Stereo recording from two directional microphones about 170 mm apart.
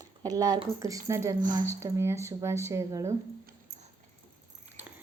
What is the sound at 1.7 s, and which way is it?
Speech, 15° right (ahead or behind).